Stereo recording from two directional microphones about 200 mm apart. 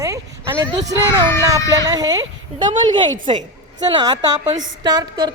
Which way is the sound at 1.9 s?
20° right (ahead or behind).